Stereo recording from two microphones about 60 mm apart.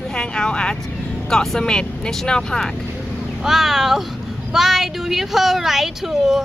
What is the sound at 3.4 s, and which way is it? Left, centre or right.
Speech, centre.